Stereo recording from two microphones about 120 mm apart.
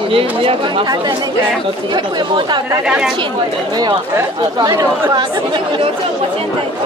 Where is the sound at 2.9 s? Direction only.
5° right (ahead or behind).